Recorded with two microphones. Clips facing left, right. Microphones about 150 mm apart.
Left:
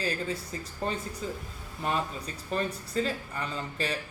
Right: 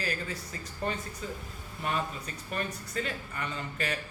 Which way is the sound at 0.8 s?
30° left (ahead or behind).